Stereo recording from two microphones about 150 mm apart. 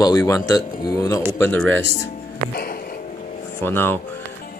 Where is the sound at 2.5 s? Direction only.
90° left.